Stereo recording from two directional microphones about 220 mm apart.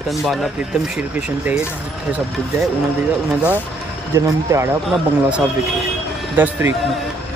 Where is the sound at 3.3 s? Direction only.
5° right (ahead or behind).